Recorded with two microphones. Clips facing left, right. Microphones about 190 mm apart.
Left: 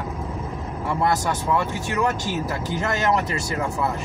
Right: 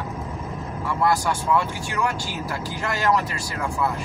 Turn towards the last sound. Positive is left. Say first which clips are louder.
# left 1 dB
turn(degrees=20)  # may be behind; listen again after turning